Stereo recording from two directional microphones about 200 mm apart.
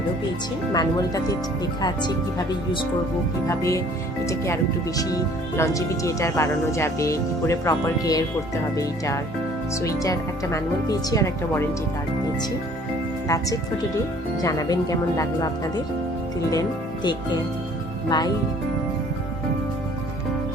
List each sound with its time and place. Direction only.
0.7 s speech: 20° left (ahead or behind)
3.4 s speech: 15° left (ahead or behind)
13.2 s speech: 15° left (ahead or behind)